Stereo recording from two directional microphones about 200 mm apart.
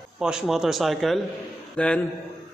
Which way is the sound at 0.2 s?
5° right (ahead or behind).